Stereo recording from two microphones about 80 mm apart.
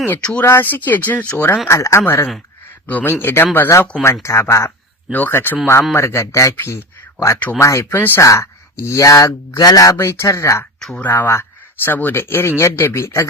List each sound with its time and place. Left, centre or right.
0.1 s speech: centre
0.4 s speech: left
1.6 s speech: left
4.0 s speech: left
5.1 s speech: left
5.9 s speech: left
6.6 s a sound: left
7.6 s speech: left
7.9 s speech: left
8.2 s speech: left
10.1 s speech: left
10.9 s speech: left